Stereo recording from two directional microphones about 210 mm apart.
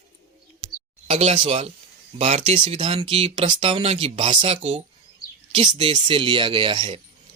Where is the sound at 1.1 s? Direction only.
30° right (ahead or behind).